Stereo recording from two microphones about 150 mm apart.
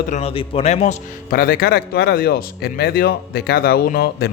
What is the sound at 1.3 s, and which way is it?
Speech, 85° left.